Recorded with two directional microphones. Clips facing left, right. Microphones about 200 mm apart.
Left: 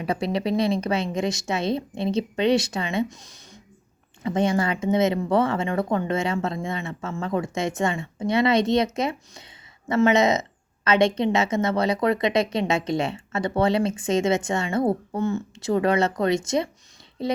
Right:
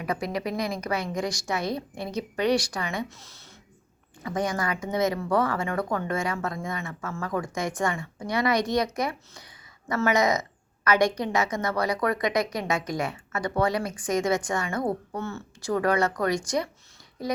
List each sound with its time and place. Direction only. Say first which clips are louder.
0.0 s a woman's voice: left 4 dB; 30° left (ahead or behind)